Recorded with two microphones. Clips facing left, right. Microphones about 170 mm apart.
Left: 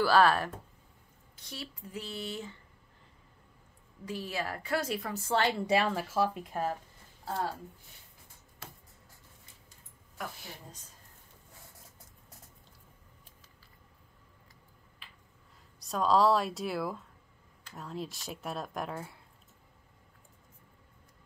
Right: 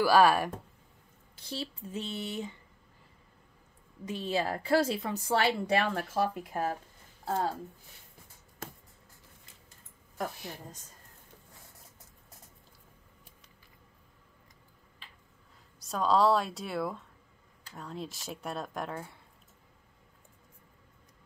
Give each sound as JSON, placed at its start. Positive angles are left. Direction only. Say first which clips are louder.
{"t": 0.0, "sound": "speech", "louder": "right 2 dB", "side_deg": -10}
{"t": 1.4, "sound": "a woman's voice", "louder": "right 6 dB", "side_deg": -30}
{"t": 4.0, "sound": "a woman's voice", "louder": "right 4 dB", "side_deg": -25}
{"t": 5.4, "sound": "speech", "louder": "left 1 dB", "side_deg": 0}
{"t": 8.6, "sound": "a sound", "louder": "right 6 dB", "side_deg": -50}
{"t": 15.8, "sound": "speech", "louder": "even", "side_deg": 0}